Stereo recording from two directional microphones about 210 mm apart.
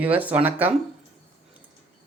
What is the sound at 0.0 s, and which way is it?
Speech, 10° right (ahead or behind).